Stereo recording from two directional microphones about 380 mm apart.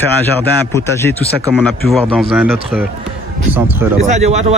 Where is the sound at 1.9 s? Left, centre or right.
Centre.